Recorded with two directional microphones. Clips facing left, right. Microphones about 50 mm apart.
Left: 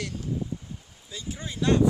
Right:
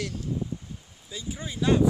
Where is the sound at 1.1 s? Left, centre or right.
Centre.